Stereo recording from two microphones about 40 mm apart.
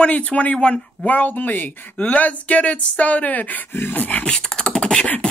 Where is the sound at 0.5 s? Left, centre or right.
Left.